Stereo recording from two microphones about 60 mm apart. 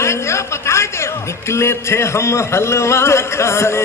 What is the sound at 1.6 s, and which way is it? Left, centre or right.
A man's voice, left.